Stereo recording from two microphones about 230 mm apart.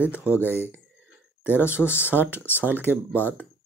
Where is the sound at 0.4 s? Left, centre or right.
Centre.